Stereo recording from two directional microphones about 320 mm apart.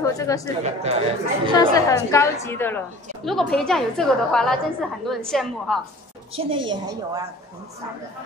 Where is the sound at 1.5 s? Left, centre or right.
Centre.